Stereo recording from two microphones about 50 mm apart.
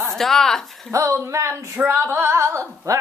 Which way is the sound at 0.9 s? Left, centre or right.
Right.